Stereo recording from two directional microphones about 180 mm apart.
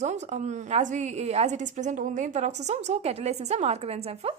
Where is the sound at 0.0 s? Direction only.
40° right (ahead or behind).